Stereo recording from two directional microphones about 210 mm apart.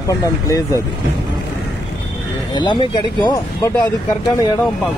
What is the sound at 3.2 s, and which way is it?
Speech, 20° left (ahead or behind).